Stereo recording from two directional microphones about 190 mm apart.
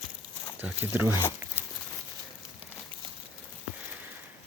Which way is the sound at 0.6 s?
10° right (ahead or behind).